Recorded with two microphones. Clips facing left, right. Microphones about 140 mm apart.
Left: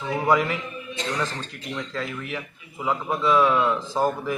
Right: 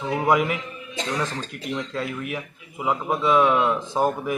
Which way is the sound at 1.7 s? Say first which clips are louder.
Right 2 dB; 10° right (ahead or behind).